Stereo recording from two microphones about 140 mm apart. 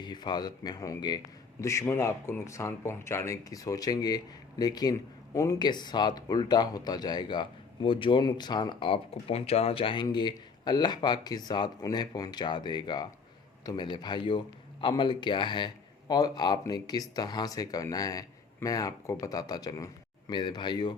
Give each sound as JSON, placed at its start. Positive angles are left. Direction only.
{"t": 0.0, "sound": "speech", "side_deg": 30}